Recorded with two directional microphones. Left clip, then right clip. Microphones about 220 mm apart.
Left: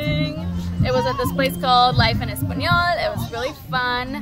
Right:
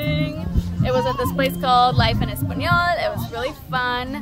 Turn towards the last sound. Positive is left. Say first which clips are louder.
# left 1 dB
turn(degrees=0)  # may be behind; listen again after turning